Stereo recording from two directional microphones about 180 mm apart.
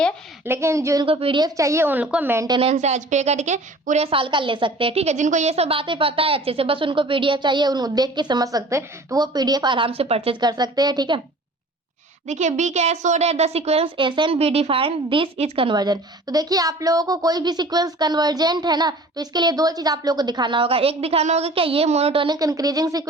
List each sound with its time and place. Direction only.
0.4 s a woman's voice: 15° right (ahead or behind)
1.0 s a woman's voice: 30° right (ahead or behind)
2.6 s a woman's voice: 35° right (ahead or behind)
12.3 s a woman's voice: 40° right (ahead or behind); by 23.0 s 20° right (ahead or behind)